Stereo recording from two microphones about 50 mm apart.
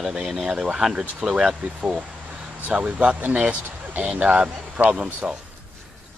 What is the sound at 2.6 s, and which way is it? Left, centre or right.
Speech, right.